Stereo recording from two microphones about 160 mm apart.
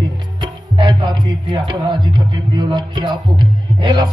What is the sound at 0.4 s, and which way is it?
Music, 25° right (ahead or behind).